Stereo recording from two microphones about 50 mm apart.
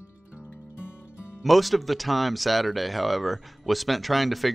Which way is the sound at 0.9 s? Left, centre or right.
Left.